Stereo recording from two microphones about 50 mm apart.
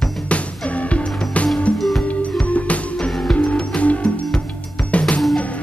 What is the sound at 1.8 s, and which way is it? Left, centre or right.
Music, centre.